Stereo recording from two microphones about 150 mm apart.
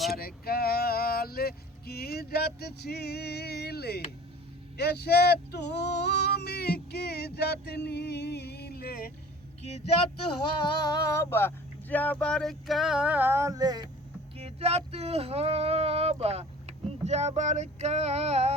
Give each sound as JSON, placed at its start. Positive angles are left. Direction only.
{"t": 0.2, "sound": "male singing", "side_deg": 90}
{"t": 4.8, "sound": "female singing", "side_deg": 90}
{"t": 9.6, "sound": "speech", "side_deg": 45}
{"t": 10.8, "sound": "speech", "side_deg": 25}
{"t": 14.3, "sound": "speech", "side_deg": -45}